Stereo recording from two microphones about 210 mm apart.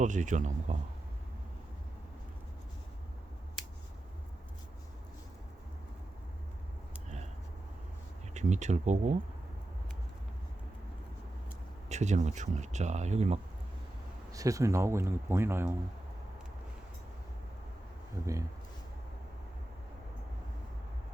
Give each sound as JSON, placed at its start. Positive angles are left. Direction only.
{"t": 0.0, "sound": "speech", "side_deg": -35}
{"t": 8.3, "sound": "speech", "side_deg": -35}
{"t": 11.9, "sound": "speech", "side_deg": -35}
{"t": 14.3, "sound": "speech", "side_deg": -15}
{"t": 18.2, "sound": "speech", "side_deg": -15}